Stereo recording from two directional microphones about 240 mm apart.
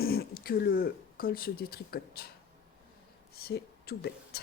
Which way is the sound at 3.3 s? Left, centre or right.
Left.